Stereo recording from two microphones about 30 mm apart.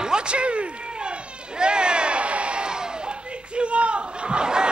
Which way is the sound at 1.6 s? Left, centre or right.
Right.